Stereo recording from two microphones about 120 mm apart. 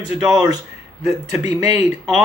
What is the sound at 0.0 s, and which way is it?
Speech, 30° right (ahead or behind).